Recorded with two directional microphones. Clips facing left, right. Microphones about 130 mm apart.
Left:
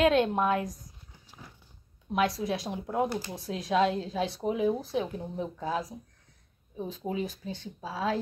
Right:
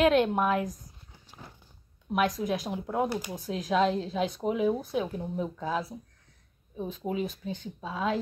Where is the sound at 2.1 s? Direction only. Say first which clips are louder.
Right 1 dB; 35° left (ahead or behind).